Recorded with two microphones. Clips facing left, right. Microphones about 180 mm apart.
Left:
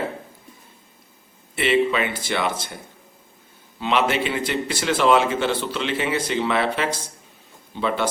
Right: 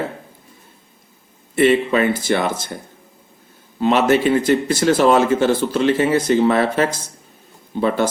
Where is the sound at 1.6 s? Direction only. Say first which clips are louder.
Right 5 dB; 45° right (ahead or behind).